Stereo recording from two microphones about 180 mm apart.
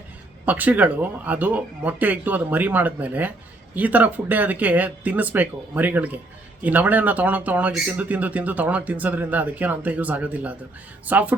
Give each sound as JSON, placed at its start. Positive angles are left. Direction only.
{"t": 0.4, "sound": "speech", "side_deg": -10}